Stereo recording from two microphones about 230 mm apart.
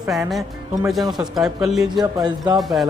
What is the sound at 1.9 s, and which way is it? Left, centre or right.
Speech, centre.